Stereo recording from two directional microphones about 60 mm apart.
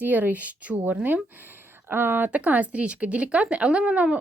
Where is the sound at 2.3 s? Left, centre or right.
Right.